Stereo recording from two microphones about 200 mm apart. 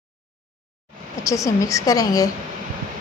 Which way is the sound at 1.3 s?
15° left (ahead or behind).